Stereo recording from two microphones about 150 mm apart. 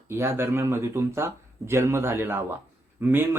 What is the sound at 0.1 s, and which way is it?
Speech, 15° right (ahead or behind).